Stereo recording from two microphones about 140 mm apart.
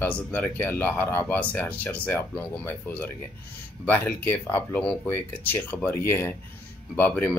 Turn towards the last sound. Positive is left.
turn(degrees=15)  # may be behind; listen again after turning